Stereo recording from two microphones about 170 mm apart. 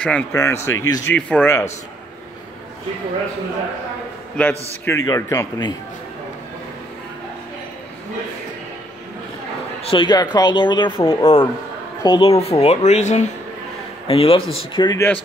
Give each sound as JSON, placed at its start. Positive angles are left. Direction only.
{"t": 0.0, "sound": "speech", "side_deg": 5}
{"t": 4.4, "sound": "speech", "side_deg": 10}
{"t": 9.8, "sound": "speech", "side_deg": 25}